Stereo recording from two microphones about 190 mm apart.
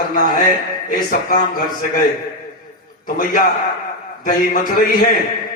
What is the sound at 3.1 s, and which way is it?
Music, 45° left (ahead or behind).